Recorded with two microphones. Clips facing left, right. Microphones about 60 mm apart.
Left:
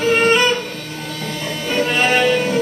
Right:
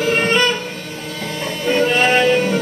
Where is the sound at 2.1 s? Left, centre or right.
Centre.